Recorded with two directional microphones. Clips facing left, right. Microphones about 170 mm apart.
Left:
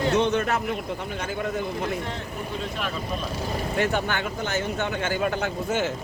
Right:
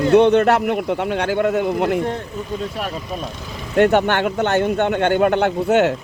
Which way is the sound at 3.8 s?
65° right (ahead or behind).